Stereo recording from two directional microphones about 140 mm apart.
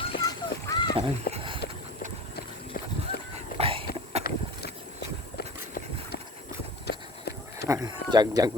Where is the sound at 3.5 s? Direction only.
45° right (ahead or behind).